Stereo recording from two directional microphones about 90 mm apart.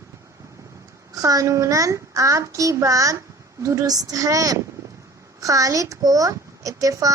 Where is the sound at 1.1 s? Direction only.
40° right (ahead or behind).